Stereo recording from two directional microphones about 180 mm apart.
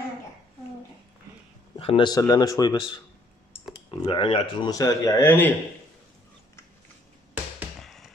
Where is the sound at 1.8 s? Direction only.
30° left (ahead or behind); by 5.5 s 10° left (ahead or behind).